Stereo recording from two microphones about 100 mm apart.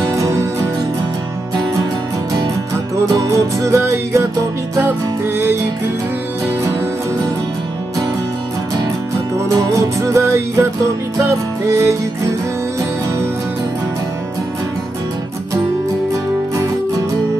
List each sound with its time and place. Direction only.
0.1 s music: 30° right (ahead or behind)
3.2 s music: 30° right (ahead or behind)
9.6 s music: 30° right (ahead or behind)